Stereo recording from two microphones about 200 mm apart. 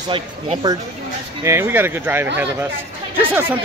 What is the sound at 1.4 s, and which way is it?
Speech, 15° right (ahead or behind).